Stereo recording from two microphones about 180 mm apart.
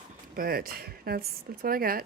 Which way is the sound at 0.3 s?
55° right (ahead or behind).